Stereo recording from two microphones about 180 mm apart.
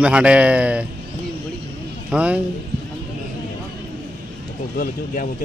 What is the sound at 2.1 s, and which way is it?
Speech, 5° right (ahead or behind).